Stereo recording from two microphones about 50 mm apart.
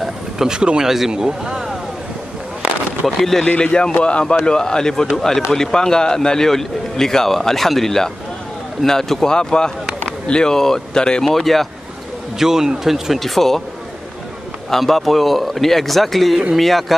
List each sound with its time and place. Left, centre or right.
0.4 s speech: centre
3.2 s speech: centre
3.4 s a man's voice: left
11.2 s speech: centre
12.4 s speech: centre
13.2 s speech: centre
14.7 s speech: centre